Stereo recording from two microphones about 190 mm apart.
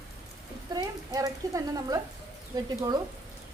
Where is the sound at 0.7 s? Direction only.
20° right (ahead or behind).